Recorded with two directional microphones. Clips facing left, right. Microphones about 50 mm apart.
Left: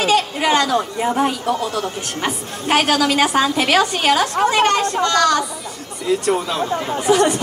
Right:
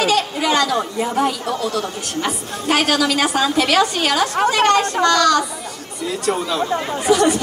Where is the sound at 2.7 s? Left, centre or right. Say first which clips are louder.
Left 1 dB; left.